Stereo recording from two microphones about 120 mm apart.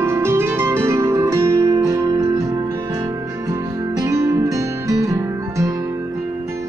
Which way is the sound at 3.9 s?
30° right (ahead or behind).